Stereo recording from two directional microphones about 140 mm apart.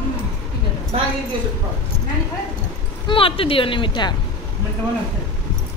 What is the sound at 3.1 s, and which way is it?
Speech, 40° left (ahead or behind).